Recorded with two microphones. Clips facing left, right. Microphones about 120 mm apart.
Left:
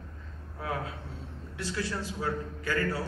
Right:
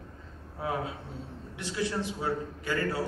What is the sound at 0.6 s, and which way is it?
A man's voice, 20° right (ahead or behind).